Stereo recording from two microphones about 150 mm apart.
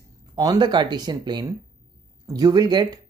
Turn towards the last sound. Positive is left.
turn(degrees=-25)  # may be behind; listen again after turning